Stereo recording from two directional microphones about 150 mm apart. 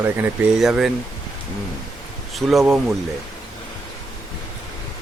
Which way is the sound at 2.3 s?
Centre (ahead or behind).